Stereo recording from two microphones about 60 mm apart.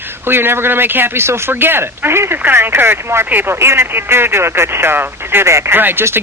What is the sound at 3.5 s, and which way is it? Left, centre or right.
Speech, right.